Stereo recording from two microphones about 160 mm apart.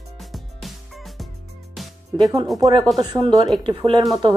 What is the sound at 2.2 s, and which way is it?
Speech, 25° right (ahead or behind).